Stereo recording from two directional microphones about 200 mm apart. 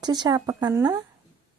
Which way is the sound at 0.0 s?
20° right (ahead or behind).